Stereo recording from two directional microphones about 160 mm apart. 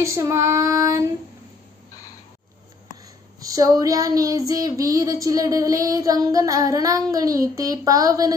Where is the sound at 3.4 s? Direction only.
20° right (ahead or behind).